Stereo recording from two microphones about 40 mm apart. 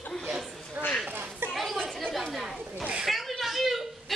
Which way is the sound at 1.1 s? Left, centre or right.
Right.